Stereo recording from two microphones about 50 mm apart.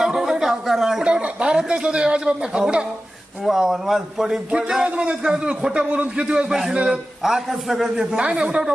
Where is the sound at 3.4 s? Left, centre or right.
Centre.